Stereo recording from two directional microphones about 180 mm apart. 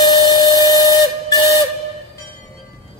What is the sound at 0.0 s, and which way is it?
Steam whistle, 20° left (ahead or behind).